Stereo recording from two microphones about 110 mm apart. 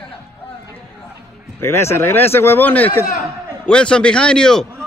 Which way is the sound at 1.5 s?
25° left (ahead or behind).